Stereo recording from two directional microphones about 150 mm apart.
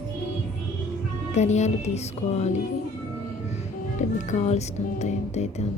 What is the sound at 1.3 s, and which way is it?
A woman's voice, 50° left (ahead or behind).